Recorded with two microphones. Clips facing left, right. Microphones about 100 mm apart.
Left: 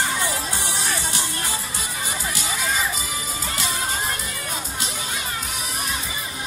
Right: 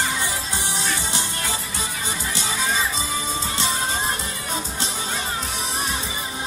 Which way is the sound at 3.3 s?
30° right (ahead or behind).